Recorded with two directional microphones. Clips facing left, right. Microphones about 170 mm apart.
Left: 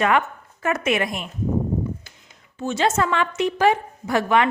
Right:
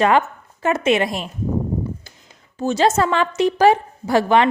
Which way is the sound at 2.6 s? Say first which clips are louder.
Right 4 dB; 35° right (ahead or behind).